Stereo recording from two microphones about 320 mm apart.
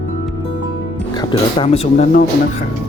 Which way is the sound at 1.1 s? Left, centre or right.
Centre.